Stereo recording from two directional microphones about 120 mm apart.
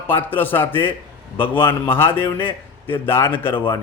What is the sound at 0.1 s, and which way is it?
A man's voice, 15° left (ahead or behind).